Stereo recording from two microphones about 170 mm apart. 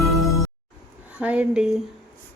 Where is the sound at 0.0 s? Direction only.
Centre (ahead or behind).